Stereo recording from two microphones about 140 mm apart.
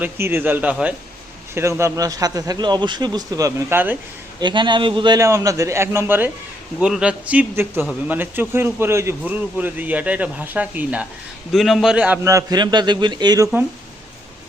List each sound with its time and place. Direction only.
0.0 s a man's voice: 15° right (ahead or behind)
1.5 s a man's voice: 20° right (ahead or behind)
4.4 s a man's voice: 35° right (ahead or behind); by 11.0 s 10° right (ahead or behind)
11.5 s a man's voice: centre (ahead or behind)
12.2 s a man's voice: 20° right (ahead or behind)